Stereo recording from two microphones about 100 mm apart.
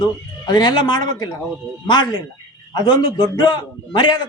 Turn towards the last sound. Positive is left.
turn(degrees=45)  # may be behind; listen again after turning